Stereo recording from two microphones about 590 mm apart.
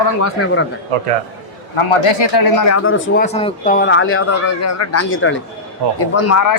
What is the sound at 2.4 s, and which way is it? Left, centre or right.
Speech, left.